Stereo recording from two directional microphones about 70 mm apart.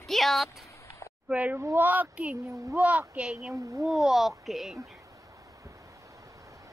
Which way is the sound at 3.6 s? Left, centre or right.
Right.